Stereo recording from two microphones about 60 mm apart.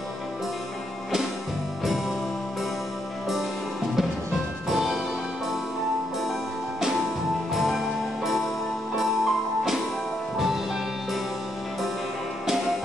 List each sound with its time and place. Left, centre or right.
4.6 s music: centre
7.5 s music: centre